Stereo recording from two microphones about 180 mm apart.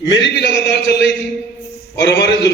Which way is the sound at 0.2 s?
75° left (ahead or behind).